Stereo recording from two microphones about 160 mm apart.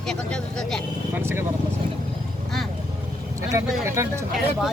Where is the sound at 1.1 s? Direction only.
15° right (ahead or behind).